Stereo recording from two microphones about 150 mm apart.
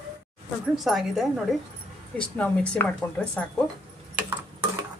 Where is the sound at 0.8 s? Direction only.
Centre (ahead or behind); by 3.2 s 15° left (ahead or behind).